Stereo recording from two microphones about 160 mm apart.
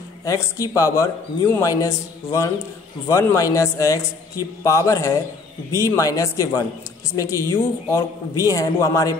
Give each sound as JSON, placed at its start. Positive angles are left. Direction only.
{"t": 0.2, "sound": "a man's voice", "side_deg": 20}